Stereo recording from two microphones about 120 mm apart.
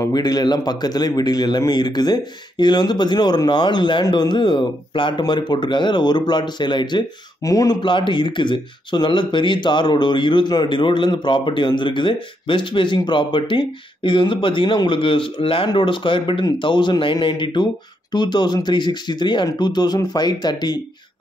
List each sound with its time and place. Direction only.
0.0 s a man's voice: 35° left (ahead or behind)
7.9 s a man's voice: 45° left (ahead or behind)